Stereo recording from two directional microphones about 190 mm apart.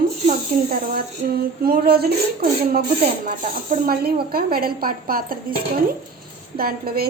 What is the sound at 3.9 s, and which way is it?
A woman's voice, 55° right (ahead or behind).